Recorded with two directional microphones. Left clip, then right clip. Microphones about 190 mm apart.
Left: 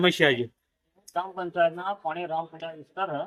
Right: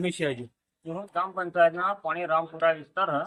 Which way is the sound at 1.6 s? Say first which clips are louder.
Right 2 dB; centre (ahead or behind).